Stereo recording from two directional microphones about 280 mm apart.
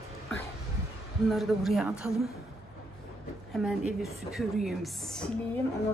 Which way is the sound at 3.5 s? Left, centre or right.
Centre.